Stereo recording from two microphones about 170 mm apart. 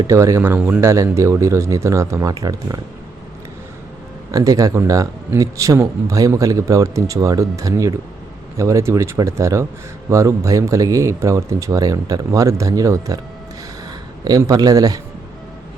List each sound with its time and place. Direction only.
0.0 s speech: 20° right (ahead or behind)
4.3 s speech: 20° right (ahead or behind)
14.3 s speech: 20° right (ahead or behind)